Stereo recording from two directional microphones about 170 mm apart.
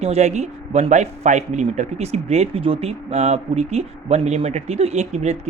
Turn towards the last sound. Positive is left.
turn(degrees=-40)  # may be behind; listen again after turning